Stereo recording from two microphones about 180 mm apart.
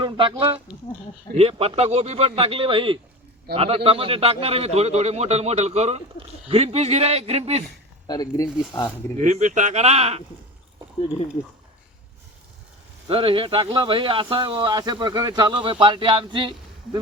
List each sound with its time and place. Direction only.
0.0 s a man's voice: 30° right (ahead or behind)
8.0 s speech: 20° left (ahead or behind)
9.1 s a man's voice: 45° right (ahead or behind)
13.1 s speech: 30° right (ahead or behind)